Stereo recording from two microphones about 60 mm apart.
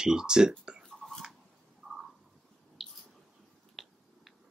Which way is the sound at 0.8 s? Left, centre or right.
Centre.